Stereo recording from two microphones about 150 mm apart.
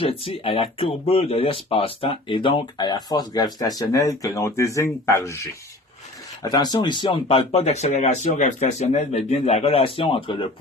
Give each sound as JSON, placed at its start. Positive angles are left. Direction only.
{"t": 0.0, "sound": "speech", "side_deg": 40}
{"t": 6.4, "sound": "speech", "side_deg": 25}